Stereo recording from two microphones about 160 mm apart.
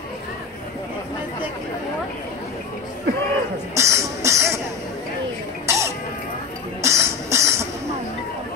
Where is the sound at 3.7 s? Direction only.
20° right (ahead or behind).